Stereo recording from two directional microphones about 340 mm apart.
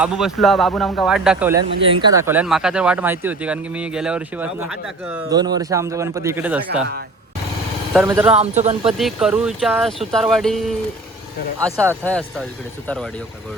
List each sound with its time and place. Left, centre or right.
0.0 s speech: centre
7.9 s speech: centre
8.5 s speech: centre
8.9 s speech: centre
12.0 s speech: centre